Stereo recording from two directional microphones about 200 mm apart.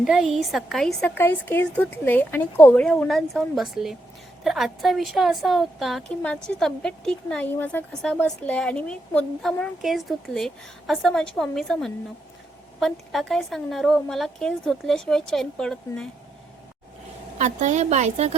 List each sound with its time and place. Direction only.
0.0 s a woman's voice: centre (ahead or behind)
17.3 s a woman's voice: 35° right (ahead or behind)